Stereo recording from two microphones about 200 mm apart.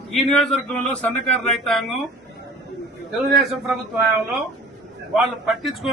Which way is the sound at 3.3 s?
Centre (ahead or behind).